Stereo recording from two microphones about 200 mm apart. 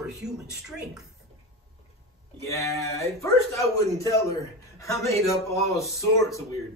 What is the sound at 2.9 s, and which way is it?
A man's voice, 15° left (ahead or behind).